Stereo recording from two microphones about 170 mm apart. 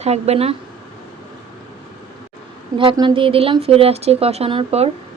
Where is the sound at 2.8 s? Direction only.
30° right (ahead or behind).